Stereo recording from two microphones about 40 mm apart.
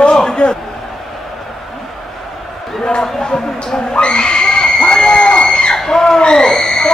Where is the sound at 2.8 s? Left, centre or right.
Centre.